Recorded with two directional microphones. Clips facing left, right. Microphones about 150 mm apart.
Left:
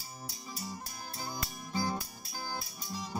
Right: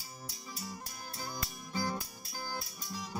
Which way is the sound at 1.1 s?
15° left (ahead or behind).